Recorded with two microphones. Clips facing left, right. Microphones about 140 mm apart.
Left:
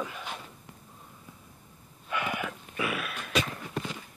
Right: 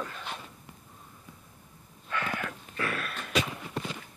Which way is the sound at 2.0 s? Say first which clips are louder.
Left 1 dB; 15° left (ahead or behind).